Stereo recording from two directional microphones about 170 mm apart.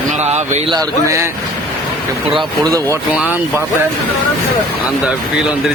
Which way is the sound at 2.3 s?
20° right (ahead or behind).